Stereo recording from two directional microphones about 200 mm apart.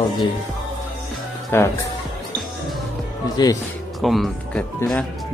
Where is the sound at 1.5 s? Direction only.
10° left (ahead or behind).